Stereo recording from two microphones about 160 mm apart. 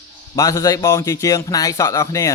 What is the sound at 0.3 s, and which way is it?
Speech, 20° left (ahead or behind).